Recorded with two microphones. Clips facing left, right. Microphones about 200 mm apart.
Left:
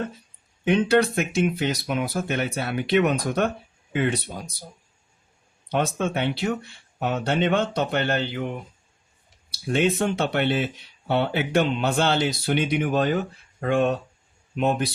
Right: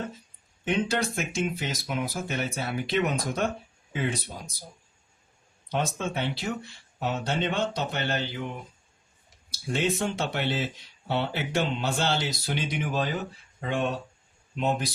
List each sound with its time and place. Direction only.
0.7 s speech: 60° left (ahead or behind)
5.6 s speech: 60° left (ahead or behind)
9.7 s speech: 60° left (ahead or behind)